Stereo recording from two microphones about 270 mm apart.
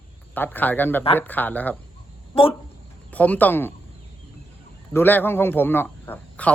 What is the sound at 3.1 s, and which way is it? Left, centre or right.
Speech, centre.